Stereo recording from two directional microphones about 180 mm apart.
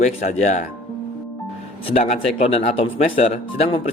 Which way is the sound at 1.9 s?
40° left (ahead or behind).